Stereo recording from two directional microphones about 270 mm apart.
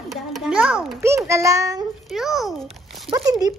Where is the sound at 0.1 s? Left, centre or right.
Centre.